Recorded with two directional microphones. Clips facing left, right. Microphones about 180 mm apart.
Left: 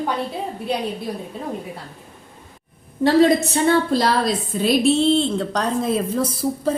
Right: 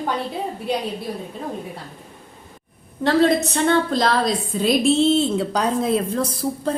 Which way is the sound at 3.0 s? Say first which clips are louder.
Left 2 dB; 10° left (ahead or behind).